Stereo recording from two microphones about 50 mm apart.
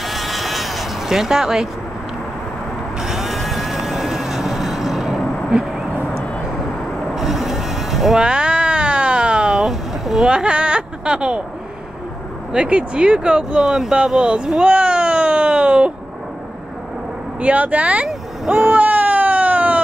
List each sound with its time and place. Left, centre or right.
0.0 s vehicle: centre
3.0 s vehicle: centre
7.2 s music: centre
8.2 s a sound: centre
12.5 s speech: centre
17.4 s speech: right
18.0 s vehicle: centre
18.7 s cat: right